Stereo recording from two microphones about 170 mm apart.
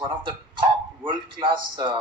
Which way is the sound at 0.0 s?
25° right (ahead or behind).